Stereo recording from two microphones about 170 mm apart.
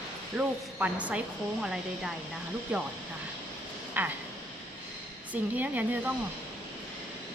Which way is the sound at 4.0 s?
10° right (ahead or behind).